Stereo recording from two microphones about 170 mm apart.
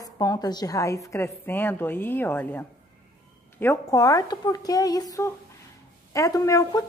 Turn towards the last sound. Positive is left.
turn(degrees=20)  # may be behind; listen again after turning